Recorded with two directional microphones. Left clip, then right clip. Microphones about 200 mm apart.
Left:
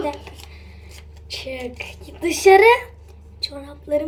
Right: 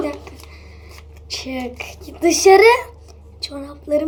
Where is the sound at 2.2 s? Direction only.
55° right (ahead or behind).